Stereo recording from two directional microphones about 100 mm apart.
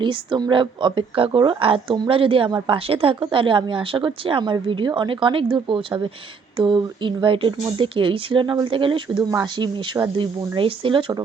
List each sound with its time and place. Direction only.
0.0 s speech: 55° right (ahead or behind)
3.3 s speech: 55° right (ahead or behind)